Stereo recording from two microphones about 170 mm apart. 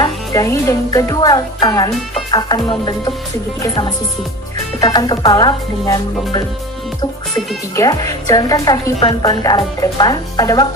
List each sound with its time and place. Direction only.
0.0 s speech: 20° left (ahead or behind)
7.8 s speech: 20° left (ahead or behind)